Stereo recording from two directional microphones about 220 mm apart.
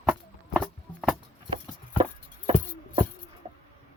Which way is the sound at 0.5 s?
Centre (ahead or behind).